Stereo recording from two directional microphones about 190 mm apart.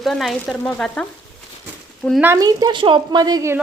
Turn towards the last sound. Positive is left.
turn(degrees=-15)  # may be behind; listen again after turning